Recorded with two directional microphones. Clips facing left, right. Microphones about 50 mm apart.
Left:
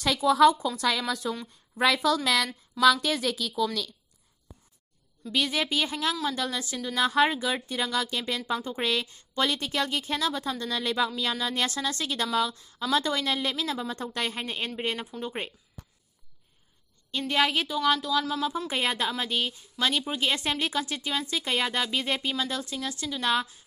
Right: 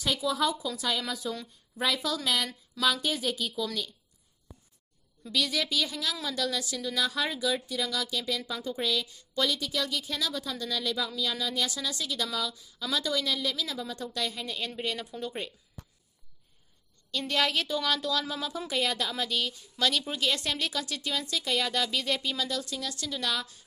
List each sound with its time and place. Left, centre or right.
0.2 s a woman's voice: left
2.0 s a woman's voice: left
2.2 s a woman's voice: left
5.3 s a woman's voice: left
17.1 s a woman's voice: centre
18.1 s speech: centre
18.7 s a woman's voice: left